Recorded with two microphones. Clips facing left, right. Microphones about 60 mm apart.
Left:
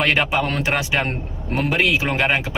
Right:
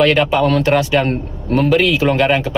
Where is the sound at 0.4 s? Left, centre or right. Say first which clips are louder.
Right 8 dB; centre.